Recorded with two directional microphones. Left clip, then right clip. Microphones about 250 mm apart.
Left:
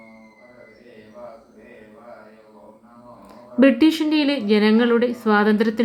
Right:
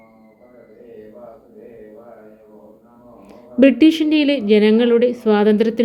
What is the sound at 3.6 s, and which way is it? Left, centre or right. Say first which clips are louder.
A woman's voice: right 3 dB; centre.